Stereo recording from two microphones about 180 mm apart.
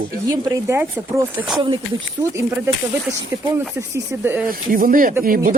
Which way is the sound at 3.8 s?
10° right (ahead or behind).